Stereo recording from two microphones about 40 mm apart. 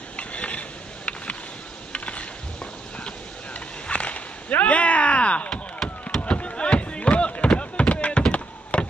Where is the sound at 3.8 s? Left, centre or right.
Left.